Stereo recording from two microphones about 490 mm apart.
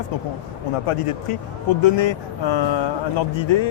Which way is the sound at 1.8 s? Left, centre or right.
Left.